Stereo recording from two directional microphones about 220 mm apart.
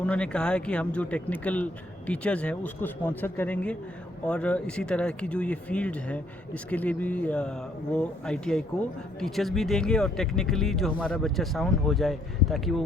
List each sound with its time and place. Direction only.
0.0 s speech: 5° left (ahead or behind)